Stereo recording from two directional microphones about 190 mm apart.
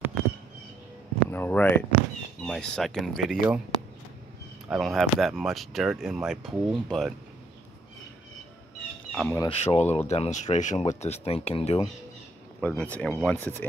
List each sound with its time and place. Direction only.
1.3 s speech: 10° left (ahead or behind)
4.6 s speech: centre (ahead or behind)
9.1 s speech: 5° left (ahead or behind)
9.5 s speech: 30° left (ahead or behind)
12.5 s speech: 10° left (ahead or behind)